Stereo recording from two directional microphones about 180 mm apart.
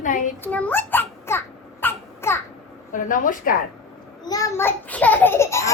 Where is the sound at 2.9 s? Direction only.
45° left (ahead or behind).